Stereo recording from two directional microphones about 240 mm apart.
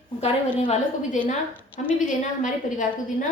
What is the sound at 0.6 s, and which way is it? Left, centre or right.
A woman's voice, left.